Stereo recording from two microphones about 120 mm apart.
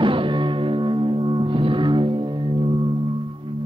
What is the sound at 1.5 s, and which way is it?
Music, 45° right (ahead or behind).